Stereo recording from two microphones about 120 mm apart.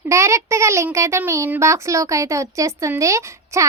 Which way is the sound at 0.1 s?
25° right (ahead or behind).